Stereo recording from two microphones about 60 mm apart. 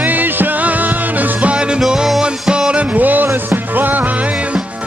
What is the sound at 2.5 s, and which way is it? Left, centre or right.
Music, centre.